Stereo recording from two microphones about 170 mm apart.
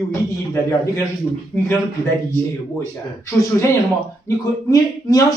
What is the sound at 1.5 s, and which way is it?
Speech, centre (ahead or behind).